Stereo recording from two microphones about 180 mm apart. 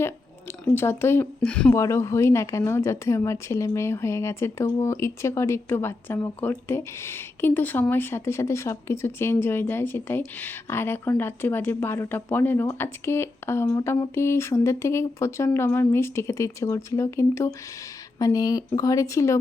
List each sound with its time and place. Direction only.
0.6 s a woman's voice: 15° left (ahead or behind)
1.7 s a woman's voice: 15° left (ahead or behind)